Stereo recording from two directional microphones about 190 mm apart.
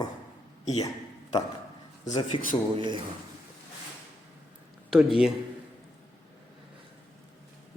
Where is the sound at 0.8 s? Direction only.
20° left (ahead or behind).